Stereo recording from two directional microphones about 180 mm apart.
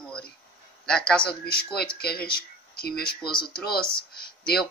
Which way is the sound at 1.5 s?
60° left (ahead or behind).